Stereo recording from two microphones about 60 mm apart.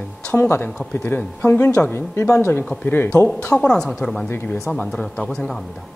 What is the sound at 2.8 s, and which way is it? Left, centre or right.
Speech, left.